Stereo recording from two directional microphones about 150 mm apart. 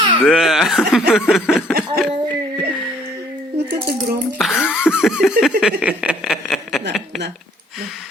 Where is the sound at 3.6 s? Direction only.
15° right (ahead or behind).